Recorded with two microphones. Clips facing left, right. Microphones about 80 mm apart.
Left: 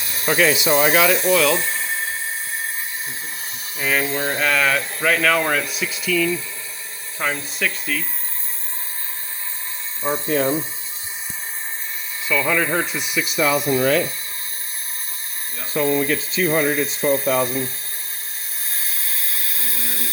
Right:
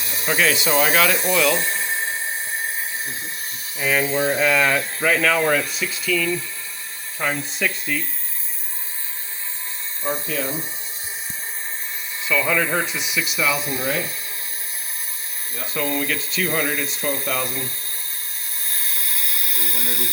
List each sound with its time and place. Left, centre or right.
0.3 s speech: centre
0.5 s speech: centre
1.1 s speech: centre
3.8 s speech: centre
10.2 s speech: left
12.3 s speech: centre
12.9 s speech: centre
13.2 s speech: left
16.0 s speech: left
17.4 s speech: centre
18.9 s a sound: centre